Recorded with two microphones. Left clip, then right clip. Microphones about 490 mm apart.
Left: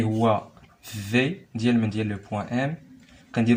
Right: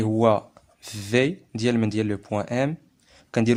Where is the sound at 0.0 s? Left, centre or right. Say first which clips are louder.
Right 3 dB; right.